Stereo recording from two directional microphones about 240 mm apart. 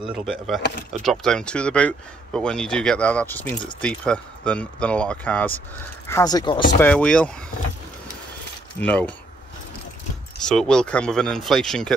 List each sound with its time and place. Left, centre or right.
0.1 s speech: centre
6.8 s speech: centre
8.7 s speech: centre
10.4 s speech: centre